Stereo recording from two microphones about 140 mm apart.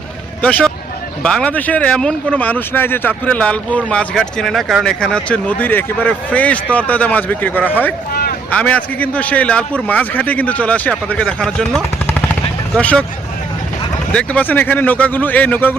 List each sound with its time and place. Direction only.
0.4 s speech: 10° left (ahead or behind)
8.1 s a sound: 90° left
8.4 s speech: 10° left (ahead or behind)
14.1 s speech: 10° left (ahead or behind)